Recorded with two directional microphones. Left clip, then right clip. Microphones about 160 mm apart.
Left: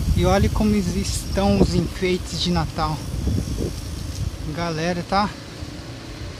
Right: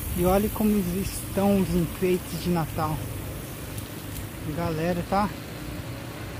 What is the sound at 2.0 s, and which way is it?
Speech, 5° left (ahead or behind).